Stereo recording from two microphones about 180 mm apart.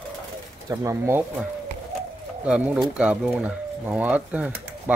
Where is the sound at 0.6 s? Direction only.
15° right (ahead or behind).